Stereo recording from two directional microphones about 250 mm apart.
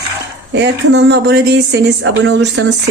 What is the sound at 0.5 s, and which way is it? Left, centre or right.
Speech, right.